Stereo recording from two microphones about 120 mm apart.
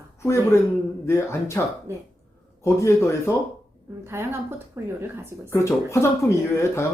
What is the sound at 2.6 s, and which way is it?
Speech, 25° left (ahead or behind).